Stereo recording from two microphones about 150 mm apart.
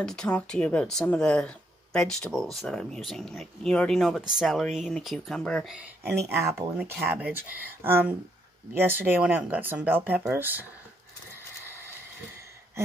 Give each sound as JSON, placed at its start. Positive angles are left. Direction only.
{"t": 0.0, "sound": "speech", "side_deg": 5}
{"t": 6.0, "sound": "speech", "side_deg": -15}